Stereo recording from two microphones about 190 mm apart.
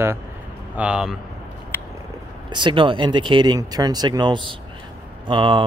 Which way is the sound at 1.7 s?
10° right (ahead or behind).